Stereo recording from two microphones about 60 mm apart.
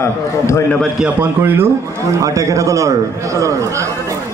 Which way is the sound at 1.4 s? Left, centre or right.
Right.